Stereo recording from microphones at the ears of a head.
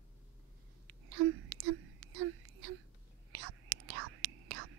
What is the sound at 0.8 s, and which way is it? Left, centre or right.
Whispering, right.